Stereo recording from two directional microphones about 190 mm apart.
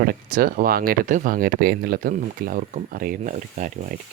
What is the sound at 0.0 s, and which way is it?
Speech, 50° right (ahead or behind).